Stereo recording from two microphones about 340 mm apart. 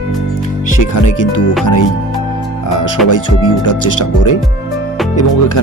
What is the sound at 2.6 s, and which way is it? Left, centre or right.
Speech, left.